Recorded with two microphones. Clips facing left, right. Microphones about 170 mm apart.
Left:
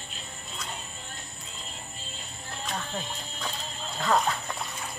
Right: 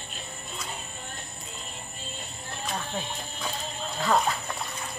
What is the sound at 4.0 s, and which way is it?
Speech, 5° right (ahead or behind).